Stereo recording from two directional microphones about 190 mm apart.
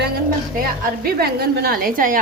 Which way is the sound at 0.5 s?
50° right (ahead or behind).